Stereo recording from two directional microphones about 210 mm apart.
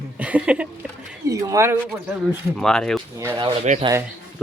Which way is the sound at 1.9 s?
Centre (ahead or behind).